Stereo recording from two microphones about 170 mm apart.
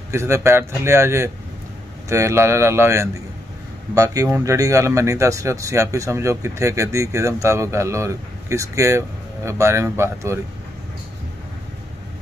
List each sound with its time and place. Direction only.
0.1 s speech: 15° right (ahead or behind)